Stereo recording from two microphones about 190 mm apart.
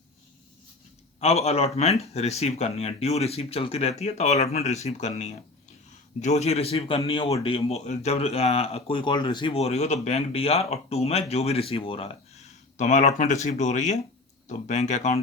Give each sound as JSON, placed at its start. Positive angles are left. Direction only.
{"t": 1.2, "sound": "speech", "side_deg": 35}